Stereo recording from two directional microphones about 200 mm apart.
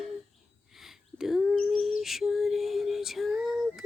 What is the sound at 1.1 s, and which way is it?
Bird, centre (ahead or behind).